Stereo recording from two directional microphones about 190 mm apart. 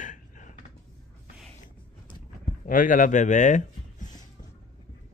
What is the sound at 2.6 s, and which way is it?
Speech, 45° left (ahead or behind).